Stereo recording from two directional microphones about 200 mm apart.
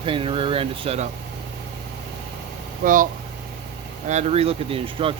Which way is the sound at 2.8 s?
45° right (ahead or behind).